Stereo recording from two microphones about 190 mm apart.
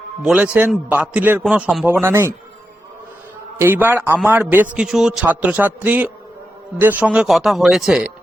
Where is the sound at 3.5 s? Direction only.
10° right (ahead or behind).